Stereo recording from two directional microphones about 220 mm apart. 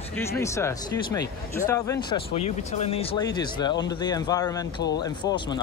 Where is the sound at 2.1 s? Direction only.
30° left (ahead or behind).